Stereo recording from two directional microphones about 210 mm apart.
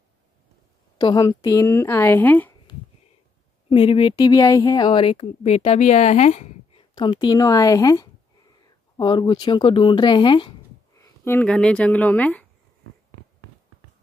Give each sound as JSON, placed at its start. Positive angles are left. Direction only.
{"t": 0.9, "sound": "speech", "side_deg": 20}
{"t": 3.7, "sound": "speech", "side_deg": 25}
{"t": 7.0, "sound": "speech", "side_deg": 20}
{"t": 11.0, "sound": "speech", "side_deg": 10}